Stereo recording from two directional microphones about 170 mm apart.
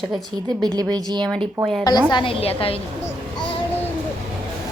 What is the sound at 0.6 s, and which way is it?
Speech, 25° right (ahead or behind).